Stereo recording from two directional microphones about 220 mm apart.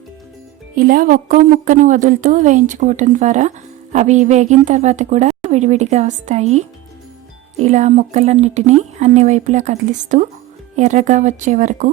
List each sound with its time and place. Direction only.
0.8 s speech: 40° right (ahead or behind)